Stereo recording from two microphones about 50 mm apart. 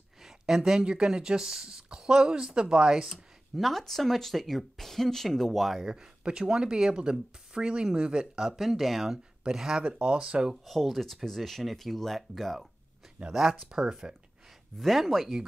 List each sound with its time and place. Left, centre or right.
0.2 s speech: centre
3.5 s speech: centre
9.8 s speech: right
10.6 s speech: centre
14.8 s speech: centre